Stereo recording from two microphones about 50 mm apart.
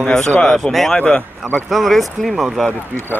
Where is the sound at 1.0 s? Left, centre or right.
Centre.